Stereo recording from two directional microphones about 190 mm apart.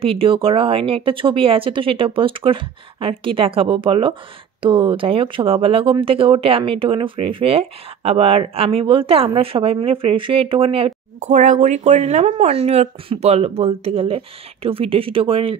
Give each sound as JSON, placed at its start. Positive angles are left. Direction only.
{"t": 0.0, "sound": "speech", "side_deg": -30}